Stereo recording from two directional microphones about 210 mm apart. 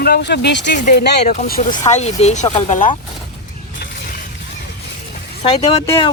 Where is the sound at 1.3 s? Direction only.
40° left (ahead or behind).